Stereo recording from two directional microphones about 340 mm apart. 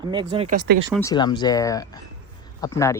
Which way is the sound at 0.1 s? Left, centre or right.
Centre.